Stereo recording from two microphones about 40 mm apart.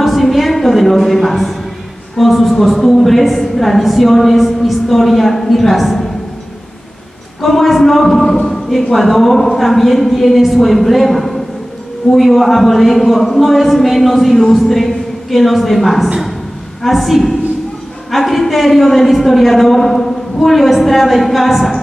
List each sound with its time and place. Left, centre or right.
0.0 s music: centre
2.1 s a man's voice: centre
7.4 s a man's voice: centre